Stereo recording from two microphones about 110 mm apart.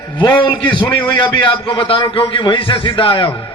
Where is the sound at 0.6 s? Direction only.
45° left (ahead or behind).